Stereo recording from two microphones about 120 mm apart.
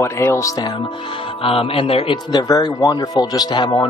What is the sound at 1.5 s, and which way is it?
Speech, 50° left (ahead or behind).